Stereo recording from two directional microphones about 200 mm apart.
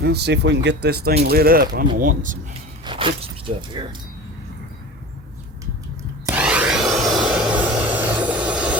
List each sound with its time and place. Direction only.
0.0 s speech: 55° right (ahead or behind)
2.8 s speech: 25° right (ahead or behind)
6.2 s a sound: 5° right (ahead or behind)